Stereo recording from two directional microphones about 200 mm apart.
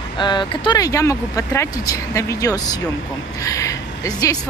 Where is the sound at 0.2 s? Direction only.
25° left (ahead or behind).